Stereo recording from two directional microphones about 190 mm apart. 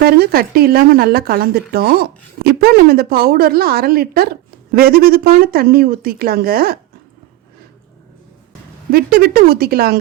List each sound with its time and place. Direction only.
0.0 s a woman's voice: 55° right (ahead or behind)
8.9 s a woman's voice: 50° right (ahead or behind)